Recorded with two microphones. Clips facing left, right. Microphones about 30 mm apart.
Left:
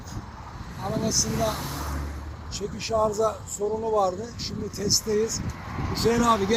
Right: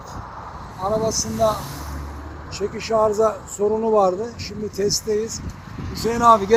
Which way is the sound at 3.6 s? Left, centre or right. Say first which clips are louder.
Right 7 dB; right.